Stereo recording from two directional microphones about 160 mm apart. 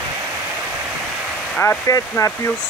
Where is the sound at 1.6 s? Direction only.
20° left (ahead or behind).